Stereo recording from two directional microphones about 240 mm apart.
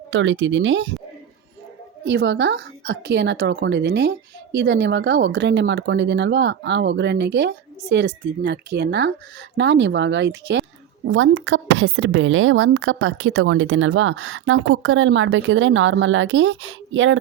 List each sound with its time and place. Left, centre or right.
0.1 s speech: right
2.0 s a woman's voice: right